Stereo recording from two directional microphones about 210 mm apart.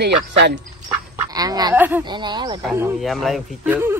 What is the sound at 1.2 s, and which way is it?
Speech, 15° right (ahead or behind).